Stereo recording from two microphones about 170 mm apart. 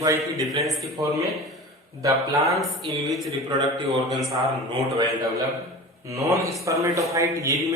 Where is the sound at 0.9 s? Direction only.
20° right (ahead or behind).